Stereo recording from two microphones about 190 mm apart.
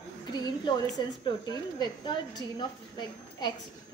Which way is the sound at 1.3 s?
20° left (ahead or behind).